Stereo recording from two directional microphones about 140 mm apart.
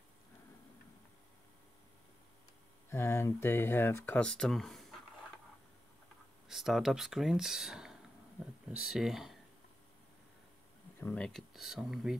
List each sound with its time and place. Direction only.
2.9 s speech: 20° left (ahead or behind); by 5.0 s centre (ahead or behind)
6.5 s speech: centre (ahead or behind)
11.0 s speech: 10° left (ahead or behind)